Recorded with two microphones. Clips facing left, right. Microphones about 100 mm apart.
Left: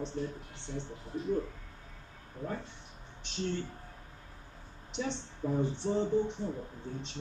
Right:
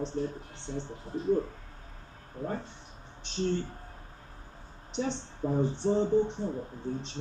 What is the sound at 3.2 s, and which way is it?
Speech, 35° right (ahead or behind).